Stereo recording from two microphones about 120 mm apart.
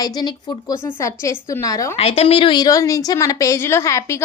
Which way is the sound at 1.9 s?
55° left (ahead or behind).